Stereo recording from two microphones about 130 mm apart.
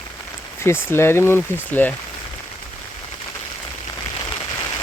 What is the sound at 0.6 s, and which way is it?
Speech, 20° left (ahead or behind).